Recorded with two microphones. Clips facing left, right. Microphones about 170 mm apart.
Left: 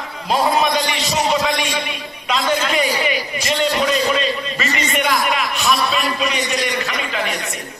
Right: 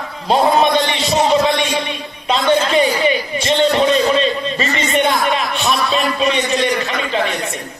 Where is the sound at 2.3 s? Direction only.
30° right (ahead or behind).